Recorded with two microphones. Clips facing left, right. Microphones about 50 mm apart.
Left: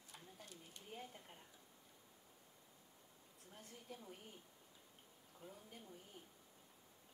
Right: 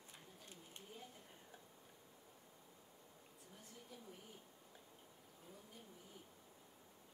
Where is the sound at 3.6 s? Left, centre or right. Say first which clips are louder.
Left 5 dB; left.